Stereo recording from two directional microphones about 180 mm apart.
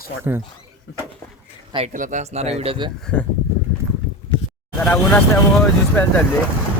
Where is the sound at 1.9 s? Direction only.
45° right (ahead or behind).